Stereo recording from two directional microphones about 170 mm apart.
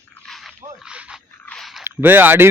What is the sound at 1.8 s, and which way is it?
Speech, 15° right (ahead or behind).